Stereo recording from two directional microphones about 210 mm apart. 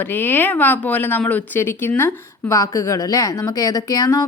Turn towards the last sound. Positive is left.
turn(degrees=15)  # may be behind; listen again after turning